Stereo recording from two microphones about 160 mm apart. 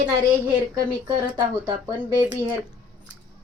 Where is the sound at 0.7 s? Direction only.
30° right (ahead or behind).